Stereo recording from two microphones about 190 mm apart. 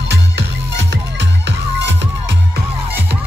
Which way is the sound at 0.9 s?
65° right (ahead or behind).